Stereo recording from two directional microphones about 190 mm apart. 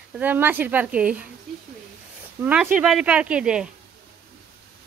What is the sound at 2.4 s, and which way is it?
Speech, 5° right (ahead or behind).